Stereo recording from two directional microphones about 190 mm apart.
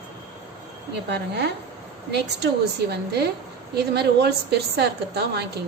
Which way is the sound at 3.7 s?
60° right (ahead or behind).